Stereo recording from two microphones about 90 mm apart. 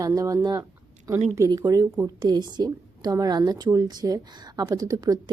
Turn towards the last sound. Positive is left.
turn(degrees=-45)  # may be behind; listen again after turning